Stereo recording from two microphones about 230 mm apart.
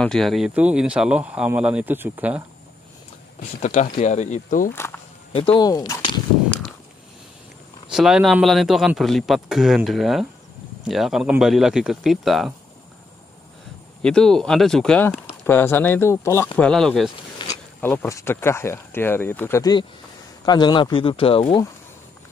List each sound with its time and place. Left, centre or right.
0.0 s speech: centre
3.6 s speech: left
4.7 s a sound: centre
5.3 s speech: left
7.9 s speech: centre
14.0 s speech: centre
17.4 s speech: centre